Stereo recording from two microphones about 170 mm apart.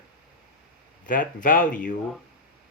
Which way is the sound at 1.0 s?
50° left (ahead or behind).